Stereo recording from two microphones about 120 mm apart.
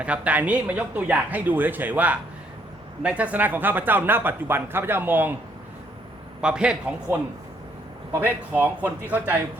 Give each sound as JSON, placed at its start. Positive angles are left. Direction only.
{"t": 0.0, "sound": "speech", "side_deg": -10}
{"t": 6.4, "sound": "speech", "side_deg": -10}